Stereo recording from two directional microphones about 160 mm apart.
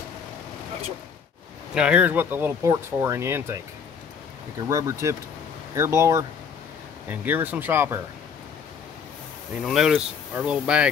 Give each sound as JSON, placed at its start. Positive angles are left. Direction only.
{"t": 1.7, "sound": "speech", "side_deg": -5}
{"t": 4.6, "sound": "speech", "side_deg": -20}
{"t": 9.7, "sound": "speech", "side_deg": -5}